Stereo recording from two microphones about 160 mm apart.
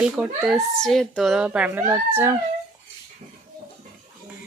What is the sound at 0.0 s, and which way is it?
A child's voice, centre (ahead or behind).